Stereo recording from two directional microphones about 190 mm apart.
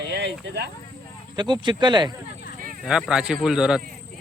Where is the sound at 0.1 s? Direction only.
60° right (ahead or behind).